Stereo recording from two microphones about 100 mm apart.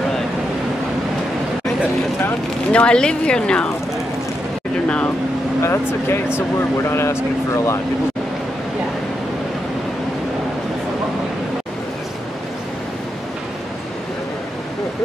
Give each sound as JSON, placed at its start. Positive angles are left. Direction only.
{"t": 2.2, "sound": "speech", "side_deg": 15}
{"t": 4.8, "sound": "speech", "side_deg": 10}
{"t": 5.6, "sound": "speech", "side_deg": 25}